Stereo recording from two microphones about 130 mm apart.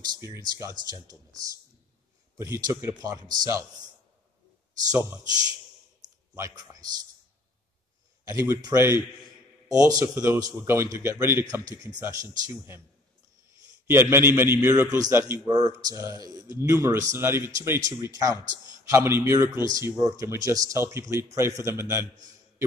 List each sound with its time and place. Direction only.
0.1 s a man's voice: 25° right (ahead or behind)
4.9 s a man's voice: 25° right (ahead or behind)
6.0 s a sound: 70° right (ahead or behind)
6.5 s a man's voice: 30° right (ahead or behind)
8.3 s a man's voice: 25° right (ahead or behind)
14.0 s a man's voice: 20° right (ahead or behind)